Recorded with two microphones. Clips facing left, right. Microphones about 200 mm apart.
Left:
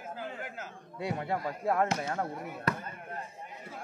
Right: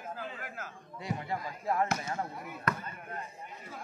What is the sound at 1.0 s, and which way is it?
Speech, 60° left (ahead or behind).